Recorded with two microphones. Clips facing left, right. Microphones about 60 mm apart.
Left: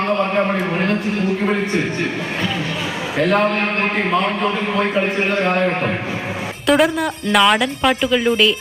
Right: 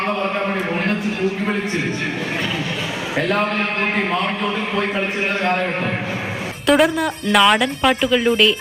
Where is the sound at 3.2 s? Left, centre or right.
Centre.